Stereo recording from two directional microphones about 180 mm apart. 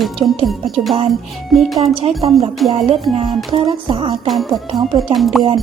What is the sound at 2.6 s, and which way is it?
Music, centre (ahead or behind).